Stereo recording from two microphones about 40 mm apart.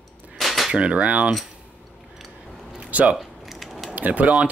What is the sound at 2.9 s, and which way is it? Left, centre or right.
Speech, right.